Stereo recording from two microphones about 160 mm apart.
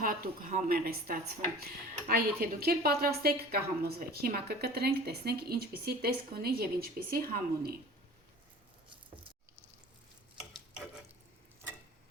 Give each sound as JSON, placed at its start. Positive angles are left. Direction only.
{"t": 0.0, "sound": "a woman's voice", "side_deg": -60}